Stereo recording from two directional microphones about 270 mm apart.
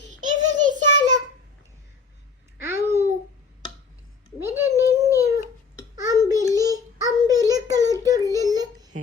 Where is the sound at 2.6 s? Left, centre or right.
Centre.